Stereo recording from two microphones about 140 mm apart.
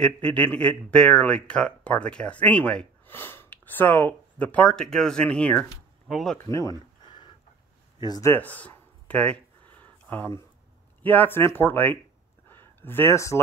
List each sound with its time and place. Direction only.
0.0 s speech: 10° left (ahead or behind)
6.3 s speech: 20° left (ahead or behind)
8.0 s speech: 30° left (ahead or behind)
8.3 s a sound: 10° left (ahead or behind)
11.0 s speech: 10° left (ahead or behind)
12.4 s a sound: 15° left (ahead or behind)